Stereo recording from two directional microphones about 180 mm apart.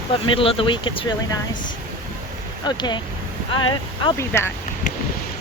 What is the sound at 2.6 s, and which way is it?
Speech, 25° left (ahead or behind).